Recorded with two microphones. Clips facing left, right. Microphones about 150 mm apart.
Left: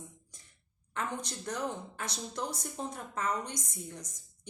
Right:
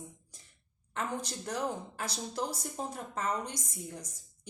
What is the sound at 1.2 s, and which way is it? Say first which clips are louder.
Speech: right 1 dB; 30° right (ahead or behind).